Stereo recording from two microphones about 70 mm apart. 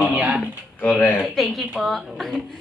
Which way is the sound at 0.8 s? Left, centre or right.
Left.